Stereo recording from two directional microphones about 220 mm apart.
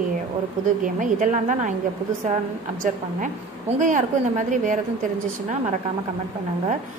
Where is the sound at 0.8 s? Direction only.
35° right (ahead or behind).